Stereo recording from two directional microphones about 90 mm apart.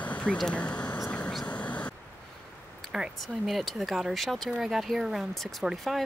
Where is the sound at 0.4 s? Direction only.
10° left (ahead or behind).